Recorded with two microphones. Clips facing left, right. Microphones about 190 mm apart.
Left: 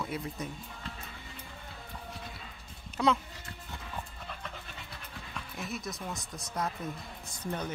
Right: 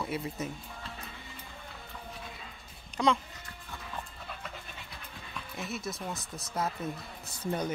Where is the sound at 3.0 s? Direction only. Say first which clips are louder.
Even; 5° left (ahead or behind).